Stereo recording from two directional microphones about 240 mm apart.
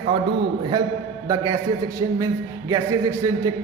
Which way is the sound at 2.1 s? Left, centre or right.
Centre.